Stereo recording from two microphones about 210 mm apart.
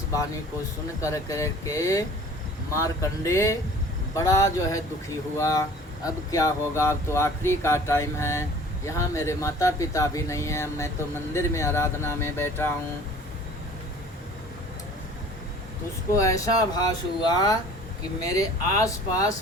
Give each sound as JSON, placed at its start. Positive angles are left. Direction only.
{"t": 1.0, "sound": "speech", "side_deg": 15}
{"t": 16.1, "sound": "speech", "side_deg": 15}